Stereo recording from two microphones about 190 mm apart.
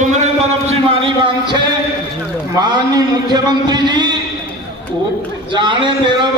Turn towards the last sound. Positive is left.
turn(degrees=-25)  # may be behind; listen again after turning